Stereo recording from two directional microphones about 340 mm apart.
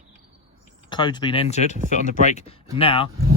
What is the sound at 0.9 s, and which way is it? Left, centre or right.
Speech, centre.